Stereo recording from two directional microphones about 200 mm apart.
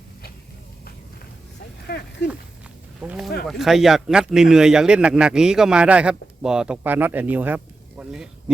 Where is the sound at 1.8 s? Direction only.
60° left (ahead or behind).